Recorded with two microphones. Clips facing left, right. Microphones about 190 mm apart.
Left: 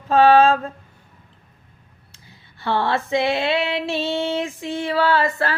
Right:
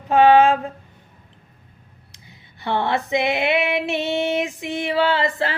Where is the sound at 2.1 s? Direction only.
20° right (ahead or behind).